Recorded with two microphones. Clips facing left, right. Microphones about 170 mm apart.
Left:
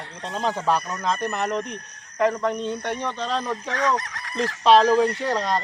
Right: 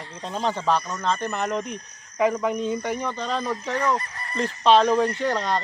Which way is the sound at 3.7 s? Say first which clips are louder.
Left 1 dB; 90° left.